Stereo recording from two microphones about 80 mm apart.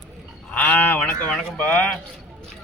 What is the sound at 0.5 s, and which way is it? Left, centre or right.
Speech, left.